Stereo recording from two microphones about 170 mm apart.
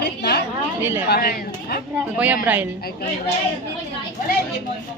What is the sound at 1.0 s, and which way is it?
Speech, 65° left (ahead or behind).